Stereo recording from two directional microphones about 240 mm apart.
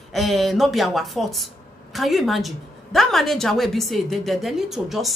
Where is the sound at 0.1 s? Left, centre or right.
Centre.